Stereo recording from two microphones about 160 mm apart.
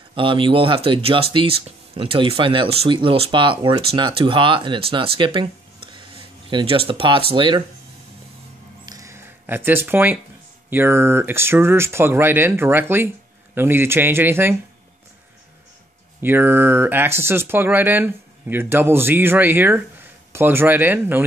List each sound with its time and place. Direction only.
0.1 s speech: 30° right (ahead or behind)
8.8 s a sound: 20° right (ahead or behind)
10.7 s speech: 15° right (ahead or behind)
16.2 s speech: 15° right (ahead or behind)